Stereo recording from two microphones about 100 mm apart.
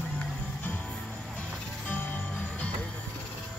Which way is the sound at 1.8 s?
15° left (ahead or behind).